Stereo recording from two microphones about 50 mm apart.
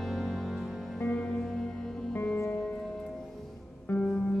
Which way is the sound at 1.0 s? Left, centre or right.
Left.